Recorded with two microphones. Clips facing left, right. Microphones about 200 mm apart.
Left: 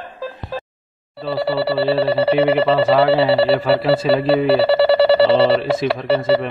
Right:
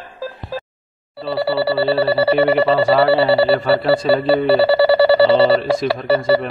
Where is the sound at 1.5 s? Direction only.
Centre (ahead or behind).